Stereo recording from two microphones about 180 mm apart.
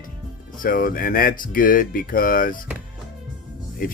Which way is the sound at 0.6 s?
50° left (ahead or behind).